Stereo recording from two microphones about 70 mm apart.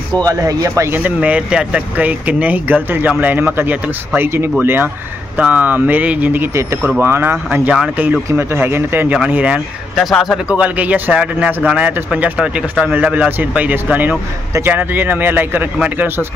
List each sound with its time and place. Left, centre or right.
0.2 s speech: right
0.9 s speech: right
9.1 s speech: centre
9.9 s speech: centre
10.5 s speech: centre